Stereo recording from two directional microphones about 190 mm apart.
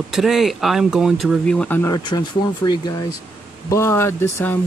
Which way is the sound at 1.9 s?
25° left (ahead or behind).